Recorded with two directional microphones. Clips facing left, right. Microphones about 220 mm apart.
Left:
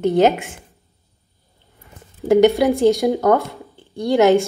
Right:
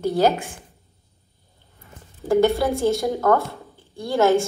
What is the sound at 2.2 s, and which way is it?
A woman's voice, 15° left (ahead or behind).